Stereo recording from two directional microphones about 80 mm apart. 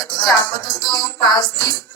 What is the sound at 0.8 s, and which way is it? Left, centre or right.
Music, left.